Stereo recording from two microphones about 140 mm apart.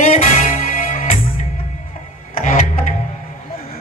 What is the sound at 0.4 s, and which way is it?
Music, 75° left (ahead or behind).